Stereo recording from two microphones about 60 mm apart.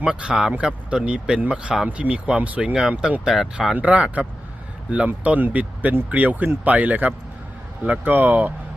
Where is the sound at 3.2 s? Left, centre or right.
Centre.